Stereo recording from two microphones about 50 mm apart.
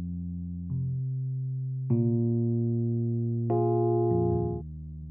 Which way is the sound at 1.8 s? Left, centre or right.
Centre.